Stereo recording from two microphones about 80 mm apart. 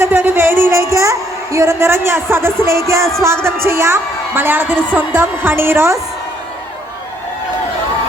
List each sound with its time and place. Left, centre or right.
0.0 s music: right
1.5 s a woman's voice: right